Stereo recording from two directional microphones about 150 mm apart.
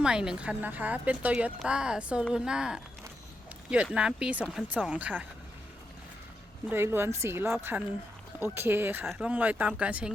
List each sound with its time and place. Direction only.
0.0 s a woman's voice: 5° right (ahead or behind)
6.7 s a woman's voice: 15° right (ahead or behind)